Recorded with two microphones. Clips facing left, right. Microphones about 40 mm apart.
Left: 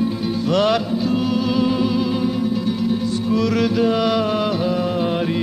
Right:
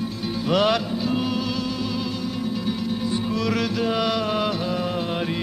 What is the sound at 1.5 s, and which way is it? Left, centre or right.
Music, centre.